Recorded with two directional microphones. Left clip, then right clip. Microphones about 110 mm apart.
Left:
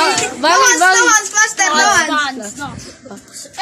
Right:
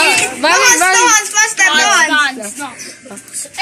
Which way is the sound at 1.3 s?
45° left (ahead or behind).